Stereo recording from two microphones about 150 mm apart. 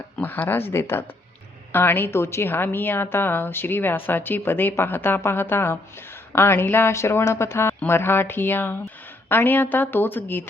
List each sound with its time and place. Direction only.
0.2 s a woman's voice: 10° left (ahead or behind)